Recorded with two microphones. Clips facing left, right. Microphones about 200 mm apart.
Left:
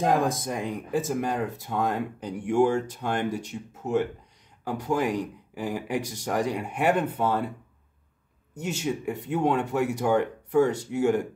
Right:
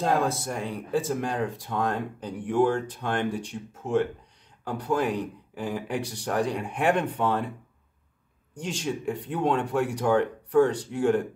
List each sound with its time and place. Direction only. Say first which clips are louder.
0.0 s speech: left 1 dB; 15° left (ahead or behind)
8.5 s speech: left 1 dB; 10° left (ahead or behind)